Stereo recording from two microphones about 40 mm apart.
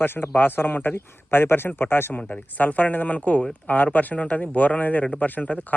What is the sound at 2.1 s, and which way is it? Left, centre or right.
Speech, left.